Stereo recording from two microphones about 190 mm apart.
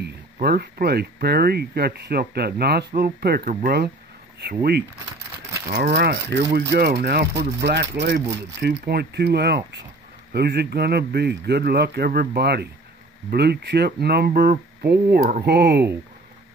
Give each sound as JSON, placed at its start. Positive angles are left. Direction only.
{"t": 0.0, "sound": "speech", "side_deg": -55}
{"t": 5.7, "sound": "speech", "side_deg": -55}